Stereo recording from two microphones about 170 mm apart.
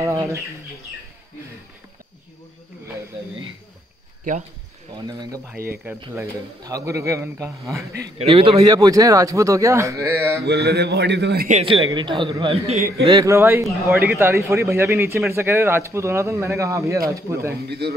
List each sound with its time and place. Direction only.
0.0 s a man's voice: 15° right (ahead or behind)
4.2 s speech: 50° right (ahead or behind)
6.1 s a man's voice: 20° right (ahead or behind)
8.2 s speech: 35° right (ahead or behind)
8.5 s a man's voice: 20° right (ahead or behind)
10.4 s a man's voice: 75° right (ahead or behind); by 11.4 s 90° right
11.6 s a man's voice: 30° right (ahead or behind)
13.0 s a man's voice: 20° right (ahead or behind)
17.6 s a man's voice: 75° right (ahead or behind)